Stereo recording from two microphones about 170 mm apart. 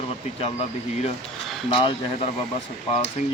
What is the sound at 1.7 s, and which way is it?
Speech, 30° left (ahead or behind).